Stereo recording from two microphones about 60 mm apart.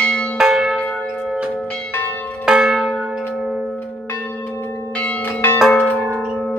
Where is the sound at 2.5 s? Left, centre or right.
Centre.